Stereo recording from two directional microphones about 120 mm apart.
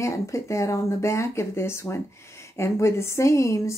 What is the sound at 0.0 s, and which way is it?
Speech, 25° left (ahead or behind).